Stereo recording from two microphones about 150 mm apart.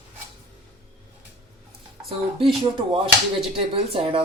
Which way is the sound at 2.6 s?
35° right (ahead or behind).